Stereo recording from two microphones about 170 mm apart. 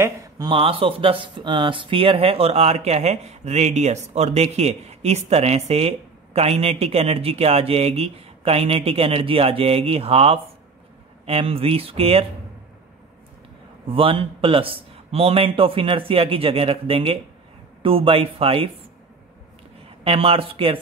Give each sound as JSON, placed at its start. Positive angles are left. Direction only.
{"t": 0.0, "sound": "speech", "side_deg": -25}
{"t": 13.8, "sound": "speech", "side_deg": -30}
{"t": 20.0, "sound": "speech", "side_deg": -35}